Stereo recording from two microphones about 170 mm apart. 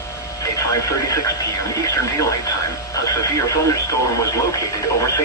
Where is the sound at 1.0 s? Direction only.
20° left (ahead or behind).